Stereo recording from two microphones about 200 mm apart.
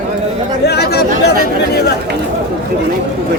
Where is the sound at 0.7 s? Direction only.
55° left (ahead or behind).